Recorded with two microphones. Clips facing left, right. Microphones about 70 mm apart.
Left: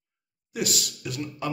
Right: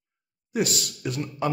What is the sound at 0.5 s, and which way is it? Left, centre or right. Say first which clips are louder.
Speech: right 4 dB; right.